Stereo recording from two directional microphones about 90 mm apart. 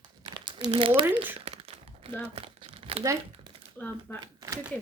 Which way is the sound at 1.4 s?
90° right.